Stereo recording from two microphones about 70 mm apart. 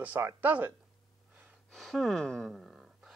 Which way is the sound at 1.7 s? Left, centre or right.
Centre.